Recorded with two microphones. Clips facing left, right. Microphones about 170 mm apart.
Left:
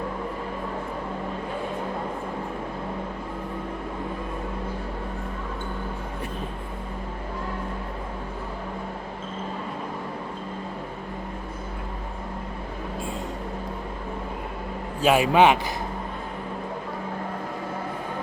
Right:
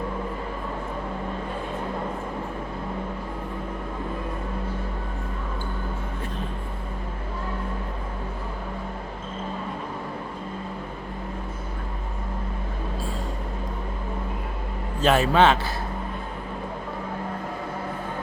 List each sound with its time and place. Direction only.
15.0 s a man's voice: 10° left (ahead or behind)